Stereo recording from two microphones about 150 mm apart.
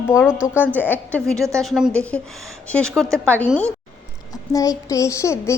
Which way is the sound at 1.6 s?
Centre (ahead or behind).